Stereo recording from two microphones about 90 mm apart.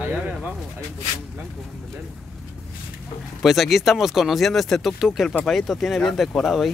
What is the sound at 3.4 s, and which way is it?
Speech, centre (ahead or behind).